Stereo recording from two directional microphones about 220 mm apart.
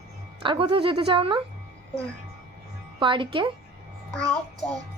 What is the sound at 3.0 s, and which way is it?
Speech, 20° right (ahead or behind).